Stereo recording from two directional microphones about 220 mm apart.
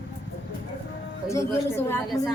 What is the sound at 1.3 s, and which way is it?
Speech, 10° left (ahead or behind).